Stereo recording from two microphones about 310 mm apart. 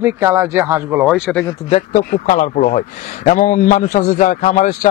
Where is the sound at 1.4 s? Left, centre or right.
Centre.